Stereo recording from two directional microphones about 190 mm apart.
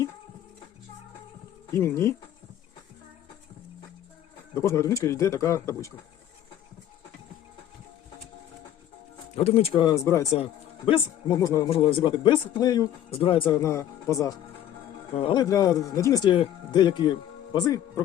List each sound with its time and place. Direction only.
1.7 s speech: 15° left (ahead or behind)
4.5 s speech: 15° left (ahead or behind)
9.3 s speech: 30° left (ahead or behind); by 10.2 s 15° left (ahead or behind)
10.3 s speech: 30° left (ahead or behind)
11.3 s speech: 15° left (ahead or behind)
11.7 s speech: 30° left (ahead or behind)
13.6 s speech: 15° left (ahead or behind)
15.1 s speech: 30° left (ahead or behind)